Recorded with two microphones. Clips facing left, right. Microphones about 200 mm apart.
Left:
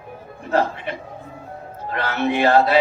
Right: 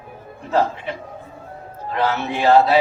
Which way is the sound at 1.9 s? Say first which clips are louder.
Even; 60° left (ahead or behind).